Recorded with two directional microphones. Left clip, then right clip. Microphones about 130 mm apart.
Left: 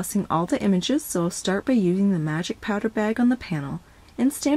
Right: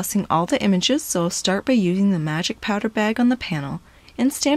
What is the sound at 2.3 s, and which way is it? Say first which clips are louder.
Speech: right 4 dB; 15° right (ahead or behind).